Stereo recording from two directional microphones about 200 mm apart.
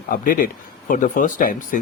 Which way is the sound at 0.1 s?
45° left (ahead or behind).